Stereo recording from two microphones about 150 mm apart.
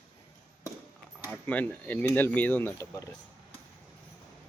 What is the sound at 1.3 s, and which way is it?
Speech, 10° left (ahead or behind).